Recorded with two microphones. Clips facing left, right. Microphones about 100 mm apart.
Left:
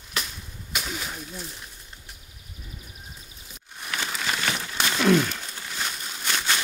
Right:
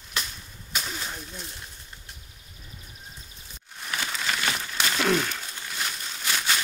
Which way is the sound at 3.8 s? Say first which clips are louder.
Left 1 dB; centre (ahead or behind).